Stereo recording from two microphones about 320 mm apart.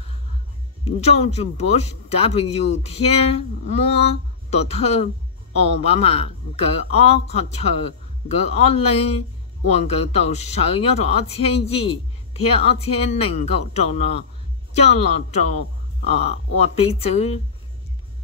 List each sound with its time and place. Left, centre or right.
0.8 s speech: centre